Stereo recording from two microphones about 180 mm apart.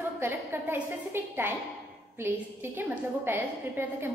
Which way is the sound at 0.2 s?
10° right (ahead or behind).